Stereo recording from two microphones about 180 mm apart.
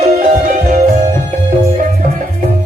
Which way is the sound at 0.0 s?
45° right (ahead or behind).